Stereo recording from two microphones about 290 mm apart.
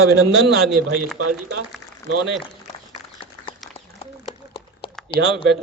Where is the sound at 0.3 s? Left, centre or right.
Right.